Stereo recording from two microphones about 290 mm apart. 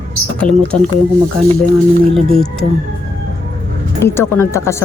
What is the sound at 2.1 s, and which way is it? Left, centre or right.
Speech, centre.